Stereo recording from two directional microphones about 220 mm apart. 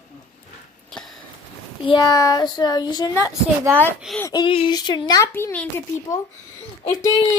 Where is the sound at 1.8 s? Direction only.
20° left (ahead or behind).